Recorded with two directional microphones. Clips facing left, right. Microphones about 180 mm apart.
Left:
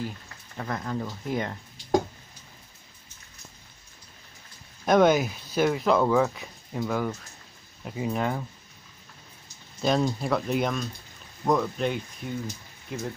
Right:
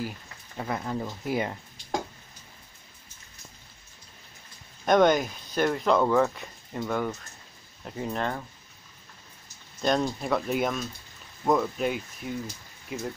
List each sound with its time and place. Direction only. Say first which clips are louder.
0.6 s speech: even; 10° right (ahead or behind)
4.8 s speech: left 1 dB; 5° left (ahead or behind)
9.8 s speech: left 1 dB; centre (ahead or behind)